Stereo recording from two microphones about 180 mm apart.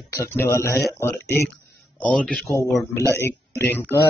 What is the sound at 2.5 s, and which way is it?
Speech, 15° left (ahead or behind).